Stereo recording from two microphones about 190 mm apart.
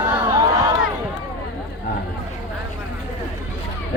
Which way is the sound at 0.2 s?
20° right (ahead or behind).